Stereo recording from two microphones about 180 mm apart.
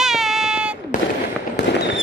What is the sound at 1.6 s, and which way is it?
Fireworks, 70° left (ahead or behind).